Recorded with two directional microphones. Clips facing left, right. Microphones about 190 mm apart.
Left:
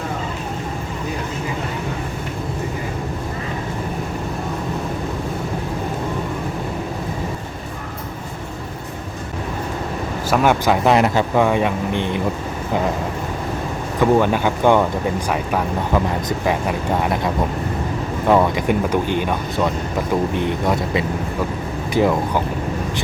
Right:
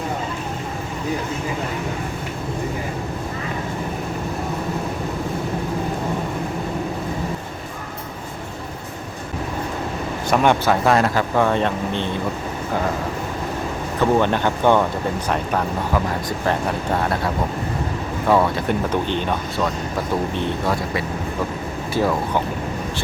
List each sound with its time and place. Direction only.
10.2 s speech: 5° left (ahead or behind)
10.8 s speech: 20° left (ahead or behind)
14.0 s speech: 10° left (ahead or behind)
16.5 s speech: 10° left (ahead or behind)